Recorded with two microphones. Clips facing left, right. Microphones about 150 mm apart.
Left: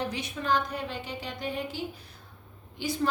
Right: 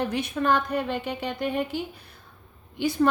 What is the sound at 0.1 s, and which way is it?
A woman's voice, 55° right (ahead or behind).